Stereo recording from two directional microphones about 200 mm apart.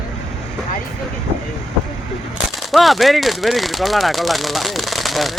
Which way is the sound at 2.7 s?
Centre (ahead or behind).